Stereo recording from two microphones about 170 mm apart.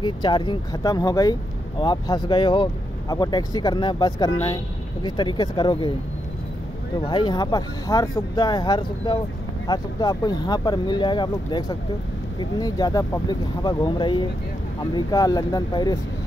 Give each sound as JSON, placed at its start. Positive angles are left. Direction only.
{"t": 0.0, "sound": "speech", "side_deg": 25}
{"t": 7.1, "sound": "speech", "side_deg": 25}